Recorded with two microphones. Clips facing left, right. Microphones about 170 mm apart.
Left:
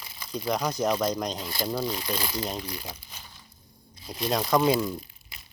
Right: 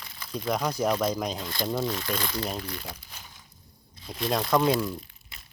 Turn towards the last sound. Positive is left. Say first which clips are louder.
# left 1 dB
turn(degrees=0)  # may be behind; listen again after turning